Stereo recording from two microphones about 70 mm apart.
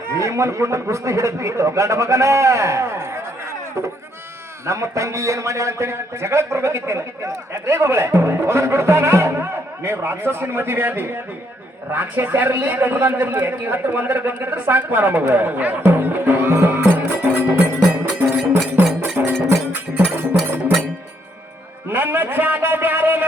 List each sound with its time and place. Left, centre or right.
0.2 s a man's voice: right
4.6 s a man's voice: right
16.9 s music: right
19.1 s cowbell: right
19.9 s music: right
21.8 s a sound: right